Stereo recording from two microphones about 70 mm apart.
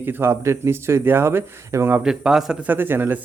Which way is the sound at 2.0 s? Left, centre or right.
Centre.